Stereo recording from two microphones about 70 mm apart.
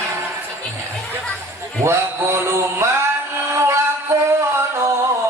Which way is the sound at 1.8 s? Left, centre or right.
Right.